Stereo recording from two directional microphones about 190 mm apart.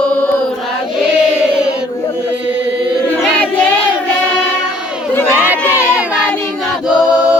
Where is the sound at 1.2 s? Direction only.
5° right (ahead or behind).